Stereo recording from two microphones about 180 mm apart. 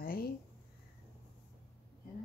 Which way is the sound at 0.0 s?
55° left (ahead or behind).